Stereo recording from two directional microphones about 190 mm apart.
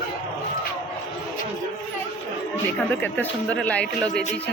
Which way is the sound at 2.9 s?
10° left (ahead or behind).